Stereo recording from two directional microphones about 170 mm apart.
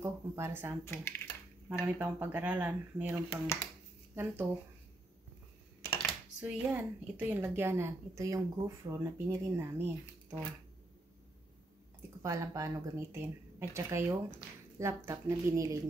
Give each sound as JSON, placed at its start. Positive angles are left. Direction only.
{"t": 0.0, "sound": "a woman's voice", "side_deg": -15}
{"t": 0.8, "sound": "speech", "side_deg": 15}
{"t": 1.7, "sound": "a woman's voice", "side_deg": -5}
{"t": 6.4, "sound": "a woman's voice", "side_deg": -10}
{"t": 12.2, "sound": "a woman's voice", "side_deg": -20}